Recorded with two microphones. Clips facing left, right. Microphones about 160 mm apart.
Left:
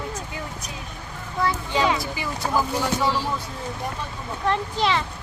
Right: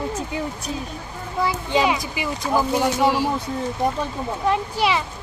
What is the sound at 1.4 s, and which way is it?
Speech, 15° right (ahead or behind).